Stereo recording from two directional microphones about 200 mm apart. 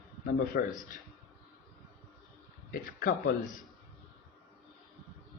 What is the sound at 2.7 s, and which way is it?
Speech, 45° left (ahead or behind).